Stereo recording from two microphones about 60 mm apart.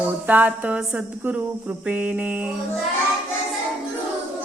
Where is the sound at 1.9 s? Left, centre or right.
Right.